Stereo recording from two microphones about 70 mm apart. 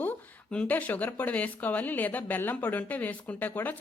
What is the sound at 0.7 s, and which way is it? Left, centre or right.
Speech, left.